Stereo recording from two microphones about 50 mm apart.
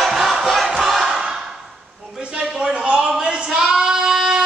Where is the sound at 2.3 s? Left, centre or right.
Centre.